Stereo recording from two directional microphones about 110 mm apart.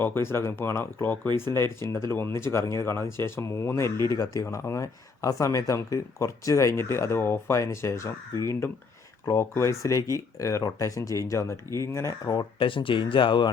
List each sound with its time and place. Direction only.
0.0 s speech: 20° left (ahead or behind)
9.3 s speech: 25° left (ahead or behind)
12.5 s speech: 50° left (ahead or behind)